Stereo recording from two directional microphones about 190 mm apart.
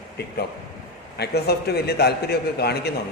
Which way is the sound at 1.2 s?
55° left (ahead or behind).